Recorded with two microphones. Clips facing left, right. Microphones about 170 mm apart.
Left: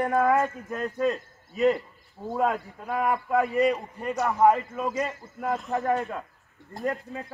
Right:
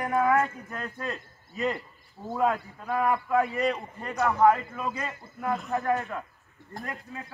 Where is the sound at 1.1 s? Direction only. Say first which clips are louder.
Left 8 dB; 5° left (ahead or behind).